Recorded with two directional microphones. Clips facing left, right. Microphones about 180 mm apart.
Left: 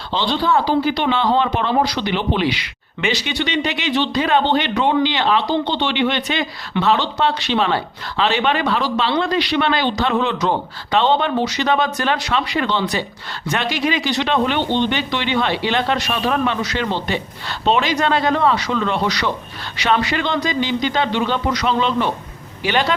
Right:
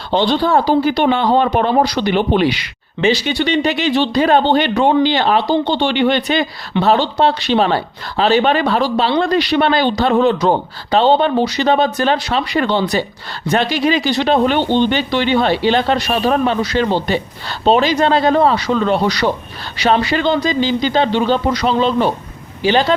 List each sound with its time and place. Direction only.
0.1 s a man's voice: 50° right (ahead or behind); by 23.0 s 30° right (ahead or behind)